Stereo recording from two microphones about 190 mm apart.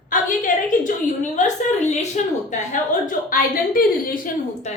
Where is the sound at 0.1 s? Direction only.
45° left (ahead or behind).